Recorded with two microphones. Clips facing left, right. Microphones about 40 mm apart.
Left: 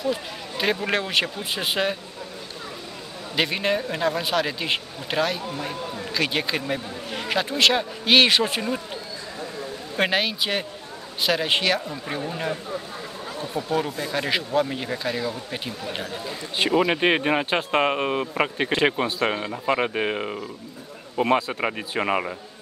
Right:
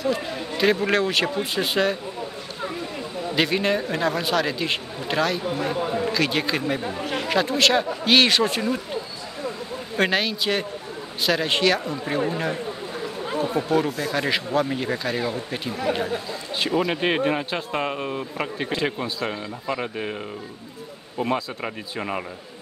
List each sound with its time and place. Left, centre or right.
0.0 s speech: centre
3.3 s speech: centre
9.9 s speech: centre
13.3 s speech: right
13.7 s speech: centre
16.5 s speech: left
17.6 s speech: left